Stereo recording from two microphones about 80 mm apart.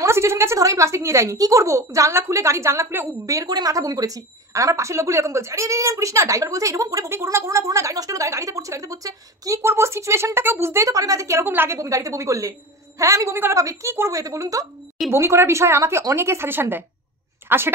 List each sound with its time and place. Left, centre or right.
0.0 s a woman's voice: right
7.1 s speech: right
9.6 s a woman's voice: right
11.8 s a woman's voice: right
15.0 s a woman's voice: right